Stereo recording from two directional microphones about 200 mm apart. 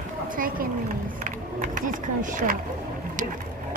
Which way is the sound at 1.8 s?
40° right (ahead or behind).